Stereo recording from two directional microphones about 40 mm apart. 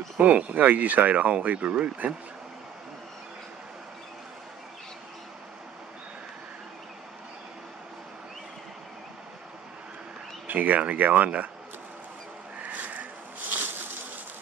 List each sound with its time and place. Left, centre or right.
0.2 s speech: right
10.4 s speech: right
12.6 s a sound: right